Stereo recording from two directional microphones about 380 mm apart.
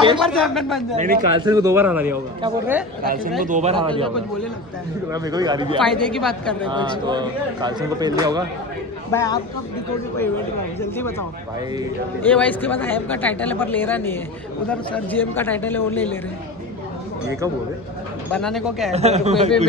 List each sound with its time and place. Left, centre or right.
0.2 s speech: centre
0.9 s speech: right
1.4 s speech: centre
3.4 s speech: centre
5.1 s speech: centre
5.8 s speech: centre
6.7 s speech: centre
9.1 s speech: centre
12.3 s speech: centre
18.3 s speech: centre
18.9 s speech: centre